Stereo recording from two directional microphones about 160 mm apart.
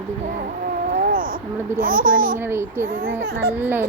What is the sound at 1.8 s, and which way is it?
Speech, 60° right (ahead or behind).